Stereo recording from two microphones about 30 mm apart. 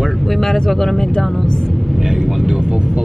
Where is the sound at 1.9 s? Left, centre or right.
Centre.